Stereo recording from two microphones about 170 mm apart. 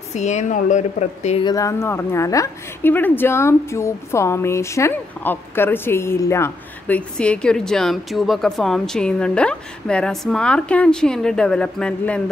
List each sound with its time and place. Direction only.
0.1 s speech: 45° left (ahead or behind)
1.4 s a woman's voice: 20° left (ahead or behind)